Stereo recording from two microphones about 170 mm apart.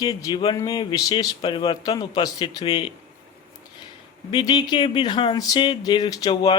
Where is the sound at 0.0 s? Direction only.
25° left (ahead or behind).